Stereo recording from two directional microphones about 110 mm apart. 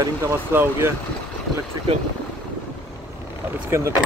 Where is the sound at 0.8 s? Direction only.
20° right (ahead or behind).